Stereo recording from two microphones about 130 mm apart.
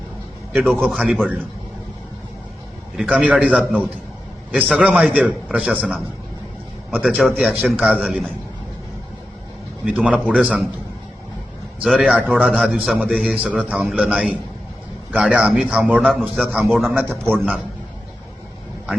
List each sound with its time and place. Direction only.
0.5 s a man's voice: centre (ahead or behind)
2.9 s a man's voice: 5° right (ahead or behind)
4.5 s a man's voice: 10° right (ahead or behind)
6.9 s a man's voice: 10° right (ahead or behind)
9.8 s a man's voice: 10° right (ahead or behind)
11.8 s a man's voice: 10° right (ahead or behind)
16.8 s a man's voice: 15° right (ahead or behind)